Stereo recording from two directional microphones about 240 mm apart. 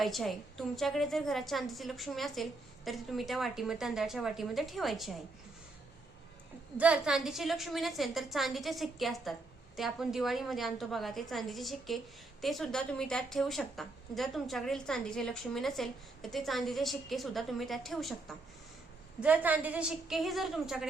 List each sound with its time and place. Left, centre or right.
0.0 s a woman's voice: centre
6.7 s a woman's voice: centre